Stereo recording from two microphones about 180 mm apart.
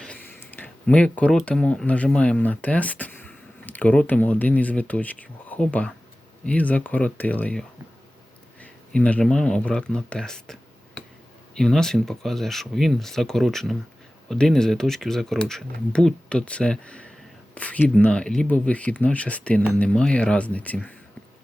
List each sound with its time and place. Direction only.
0.0 s speech: 10° left (ahead or behind)
8.6 s speech: 5° left (ahead or behind)